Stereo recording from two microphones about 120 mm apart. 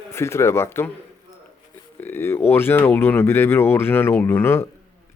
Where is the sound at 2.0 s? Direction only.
20° left (ahead or behind).